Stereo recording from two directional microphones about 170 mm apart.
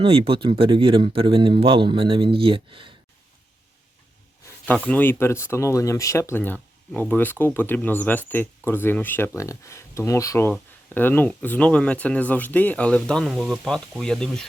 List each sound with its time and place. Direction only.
0.0 s speech: 30° right (ahead or behind)
4.6 s speech: 10° left (ahead or behind)